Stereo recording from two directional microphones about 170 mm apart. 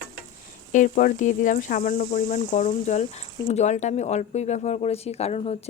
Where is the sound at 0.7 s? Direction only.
50° left (ahead or behind).